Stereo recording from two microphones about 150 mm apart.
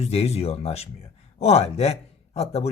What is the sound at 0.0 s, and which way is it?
Speech, 45° left (ahead or behind).